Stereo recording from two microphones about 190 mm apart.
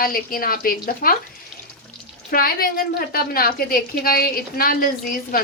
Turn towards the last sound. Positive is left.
turn(degrees=50)  # may be behind; listen again after turning